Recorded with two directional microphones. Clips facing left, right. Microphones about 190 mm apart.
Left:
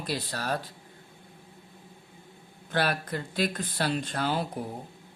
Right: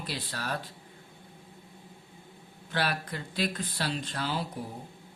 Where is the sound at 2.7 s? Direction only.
50° left (ahead or behind).